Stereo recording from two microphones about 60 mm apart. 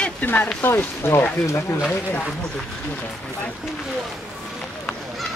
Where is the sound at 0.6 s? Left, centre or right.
Left.